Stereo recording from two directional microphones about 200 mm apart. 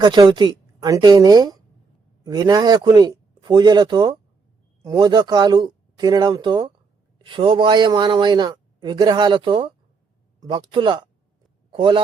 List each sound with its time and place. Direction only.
0.0 s a man's voice: 20° right (ahead or behind)